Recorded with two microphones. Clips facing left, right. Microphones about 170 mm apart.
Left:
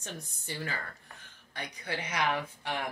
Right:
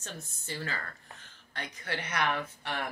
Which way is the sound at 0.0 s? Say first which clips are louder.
Left 1 dB; 15° left (ahead or behind).